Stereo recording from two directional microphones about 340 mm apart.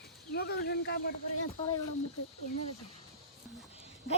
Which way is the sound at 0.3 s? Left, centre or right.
Left.